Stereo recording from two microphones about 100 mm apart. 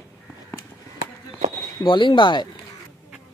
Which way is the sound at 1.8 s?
55° left (ahead or behind).